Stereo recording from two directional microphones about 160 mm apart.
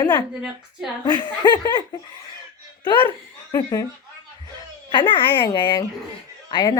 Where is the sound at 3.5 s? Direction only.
20° left (ahead or behind).